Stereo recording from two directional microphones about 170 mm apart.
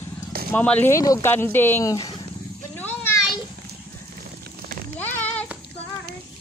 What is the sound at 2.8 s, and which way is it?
Children playing, 10° left (ahead or behind).